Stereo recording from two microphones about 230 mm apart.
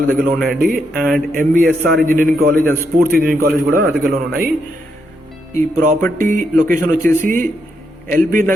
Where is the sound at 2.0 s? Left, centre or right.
Right.